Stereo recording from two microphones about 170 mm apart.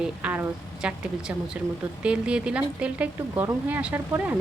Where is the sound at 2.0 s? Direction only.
5° right (ahead or behind).